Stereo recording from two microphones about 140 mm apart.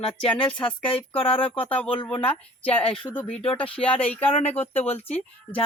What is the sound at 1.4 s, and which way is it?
Speech, 10° left (ahead or behind).